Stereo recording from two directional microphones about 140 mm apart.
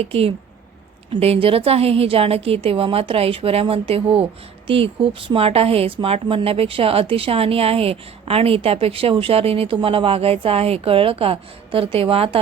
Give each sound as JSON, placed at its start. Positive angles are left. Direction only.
{"t": 0.0, "sound": "a woman's voice", "side_deg": -45}